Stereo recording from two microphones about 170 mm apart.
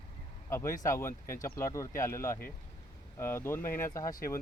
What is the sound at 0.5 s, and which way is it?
Speech, 15° left (ahead or behind).